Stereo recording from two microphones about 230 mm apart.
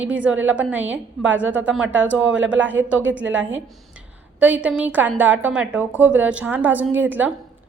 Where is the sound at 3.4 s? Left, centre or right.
Right.